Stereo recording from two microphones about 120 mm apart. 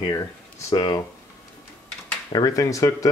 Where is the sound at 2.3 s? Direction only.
30° left (ahead or behind).